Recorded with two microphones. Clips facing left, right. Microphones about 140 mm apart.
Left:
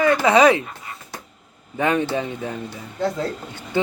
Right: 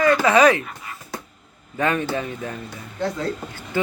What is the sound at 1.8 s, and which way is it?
Speech, 20° left (ahead or behind).